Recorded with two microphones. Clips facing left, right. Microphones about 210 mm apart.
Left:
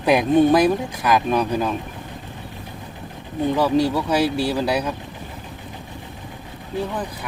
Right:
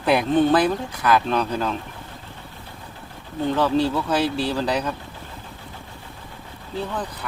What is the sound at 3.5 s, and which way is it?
Speech, 10° left (ahead or behind).